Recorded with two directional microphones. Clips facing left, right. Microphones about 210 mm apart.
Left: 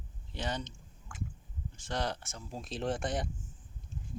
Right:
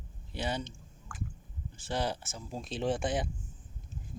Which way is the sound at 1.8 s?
5° right (ahead or behind).